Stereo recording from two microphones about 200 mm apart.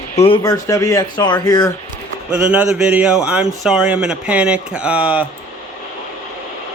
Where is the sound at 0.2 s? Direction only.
20° left (ahead or behind).